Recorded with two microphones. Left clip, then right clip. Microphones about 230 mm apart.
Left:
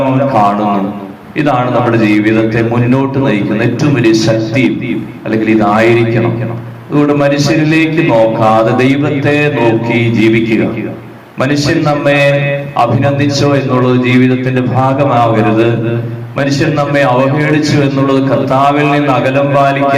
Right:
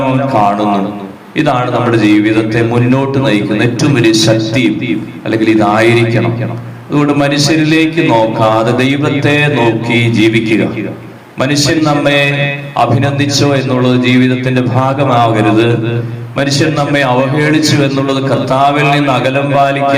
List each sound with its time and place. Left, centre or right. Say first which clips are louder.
0.3 s a man's voice: right 1 dB; right